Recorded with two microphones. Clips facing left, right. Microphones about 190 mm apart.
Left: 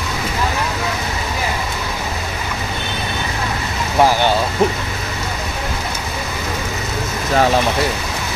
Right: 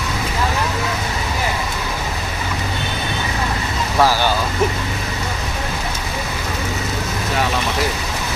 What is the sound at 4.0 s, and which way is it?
Vehicle, 20° left (ahead or behind).